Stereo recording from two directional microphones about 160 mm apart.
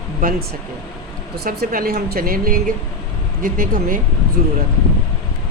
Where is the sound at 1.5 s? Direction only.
65° right (ahead or behind).